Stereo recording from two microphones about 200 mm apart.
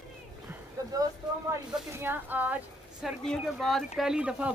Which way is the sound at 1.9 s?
10° right (ahead or behind).